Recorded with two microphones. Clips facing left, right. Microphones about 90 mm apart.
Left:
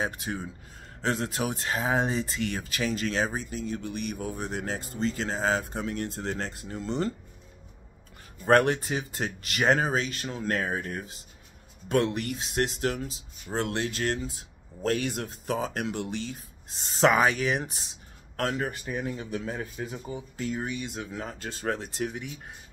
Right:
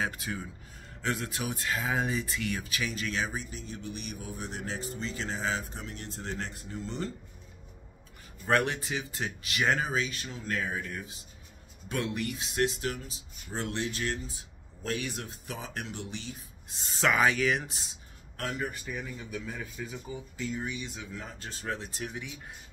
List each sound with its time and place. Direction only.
0.0 s speech: 30° left (ahead or behind)
3.4 s speech: 60° left (ahead or behind); by 5.6 s 45° left (ahead or behind)
5.6 s speech: 65° left (ahead or behind)
6.1 s speech: 45° left (ahead or behind)
8.5 s speech: 40° left (ahead or behind)
11.9 s speech: 55° left (ahead or behind)
15.7 s speech: 65° left (ahead or behind)
16.9 s speech: 35° left (ahead or behind)
18.3 s speech: 65° left (ahead or behind)
19.0 s speech: 55° left (ahead or behind)
21.1 s speech: 70° left (ahead or behind)
21.7 s speech: 55° left (ahead or behind)